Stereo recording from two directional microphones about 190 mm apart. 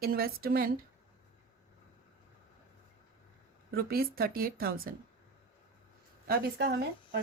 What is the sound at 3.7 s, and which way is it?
A woman's voice, 50° right (ahead or behind).